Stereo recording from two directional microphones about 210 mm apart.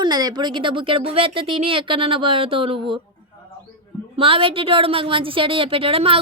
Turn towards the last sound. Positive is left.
turn(degrees=-25)  # may be behind; listen again after turning